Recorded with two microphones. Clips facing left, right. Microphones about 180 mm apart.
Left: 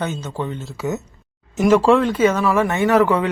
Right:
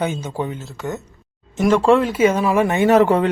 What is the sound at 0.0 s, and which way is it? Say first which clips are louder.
Speech: right 2 dB; 10° right (ahead or behind).